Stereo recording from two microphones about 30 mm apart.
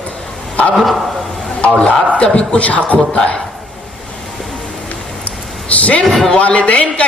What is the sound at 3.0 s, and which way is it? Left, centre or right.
Speech, left.